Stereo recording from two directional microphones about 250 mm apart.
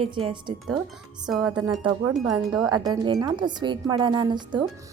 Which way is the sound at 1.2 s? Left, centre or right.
Centre.